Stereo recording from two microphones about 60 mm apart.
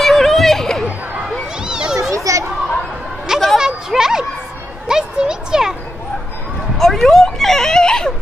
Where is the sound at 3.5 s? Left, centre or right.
Centre.